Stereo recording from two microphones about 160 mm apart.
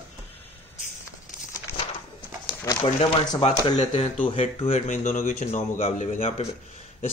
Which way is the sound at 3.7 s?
40° left (ahead or behind).